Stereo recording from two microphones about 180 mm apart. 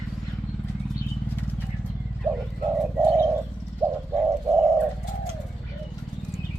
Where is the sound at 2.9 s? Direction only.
10° right (ahead or behind).